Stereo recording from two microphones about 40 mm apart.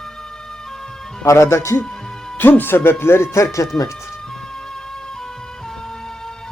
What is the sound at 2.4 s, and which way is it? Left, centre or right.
Speech, left.